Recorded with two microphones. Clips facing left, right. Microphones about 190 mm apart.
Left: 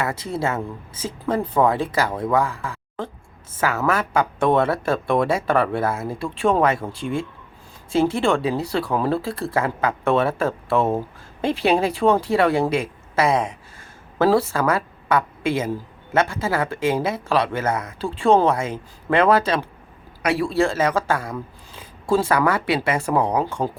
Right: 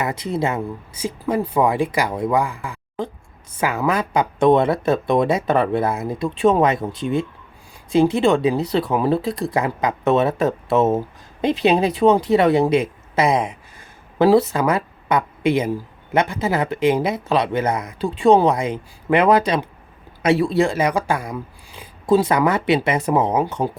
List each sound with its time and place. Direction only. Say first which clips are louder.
0.0 s speech: right 2 dB; 15° right (ahead or behind)